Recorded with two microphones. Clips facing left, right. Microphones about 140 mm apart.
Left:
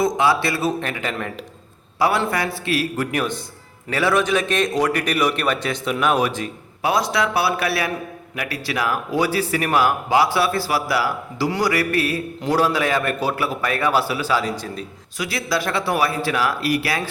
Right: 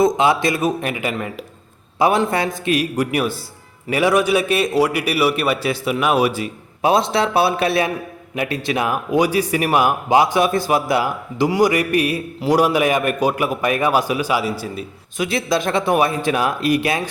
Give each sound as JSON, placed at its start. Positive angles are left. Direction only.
{"t": 0.0, "sound": "speech", "side_deg": -20}
{"t": 2.0, "sound": "speech", "side_deg": -20}
{"t": 6.8, "sound": "speech", "side_deg": -25}
{"t": 15.2, "sound": "speech", "side_deg": -20}